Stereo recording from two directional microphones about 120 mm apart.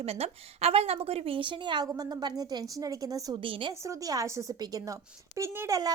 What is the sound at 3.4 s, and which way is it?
Speech, 45° right (ahead or behind).